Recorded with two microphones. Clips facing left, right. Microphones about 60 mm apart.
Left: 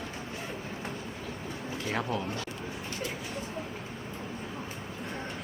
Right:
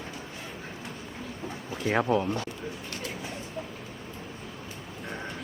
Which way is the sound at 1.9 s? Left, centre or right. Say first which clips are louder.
Right 8 dB; right.